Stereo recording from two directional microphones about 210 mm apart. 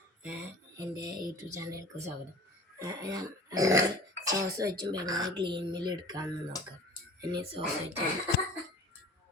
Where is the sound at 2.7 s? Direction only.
15° right (ahead or behind).